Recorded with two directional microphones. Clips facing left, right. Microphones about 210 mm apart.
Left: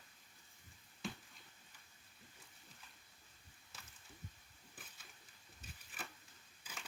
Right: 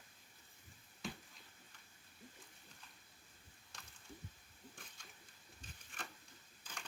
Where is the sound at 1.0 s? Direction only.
Centre (ahead or behind).